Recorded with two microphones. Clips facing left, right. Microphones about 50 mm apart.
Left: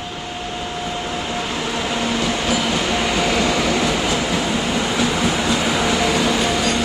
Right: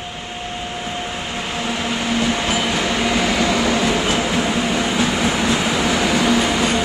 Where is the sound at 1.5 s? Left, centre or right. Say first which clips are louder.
Even; right.